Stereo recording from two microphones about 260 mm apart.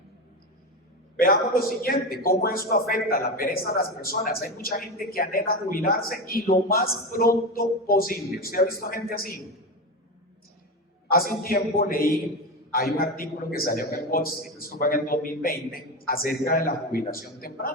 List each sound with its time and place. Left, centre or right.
1.2 s a man's voice: left
11.1 s a man's voice: left